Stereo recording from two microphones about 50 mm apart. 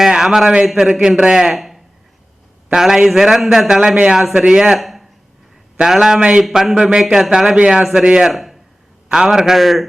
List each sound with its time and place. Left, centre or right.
0.1 s a man's voice: centre
1.5 s a sound: centre
2.7 s a man's voice: centre
4.8 s a sound: centre
5.8 s speech: centre
6.1 s a man's voice: right
6.5 s a man's voice: centre
8.3 s speech: centre
9.0 s speech: centre